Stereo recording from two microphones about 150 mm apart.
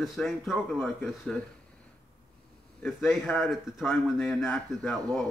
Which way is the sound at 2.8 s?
Centre (ahead or behind).